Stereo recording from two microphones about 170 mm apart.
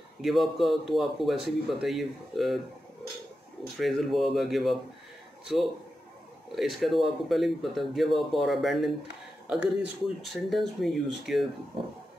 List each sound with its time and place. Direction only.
0.2 s speech: centre (ahead or behind)
3.7 s speech: centre (ahead or behind)